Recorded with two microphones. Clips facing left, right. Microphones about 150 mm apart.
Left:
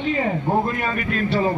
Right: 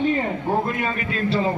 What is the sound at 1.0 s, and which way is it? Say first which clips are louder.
Speech: left 1 dB; 25° right (ahead or behind).